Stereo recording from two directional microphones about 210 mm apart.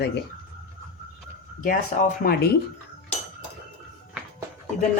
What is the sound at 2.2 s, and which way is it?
Speech, 40° left (ahead or behind).